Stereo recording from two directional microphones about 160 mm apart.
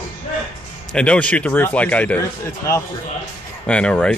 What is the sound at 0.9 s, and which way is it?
A man's voice, 5° left (ahead or behind).